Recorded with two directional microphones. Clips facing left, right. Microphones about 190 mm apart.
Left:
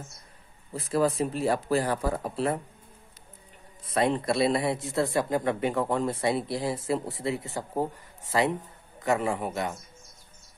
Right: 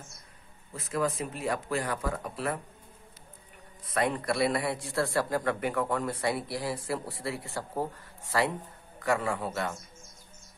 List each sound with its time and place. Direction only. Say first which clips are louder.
0.7 s speech: left 5 dB; 35° left (ahead or behind)
3.9 s speech: left 4 dB; 25° left (ahead or behind)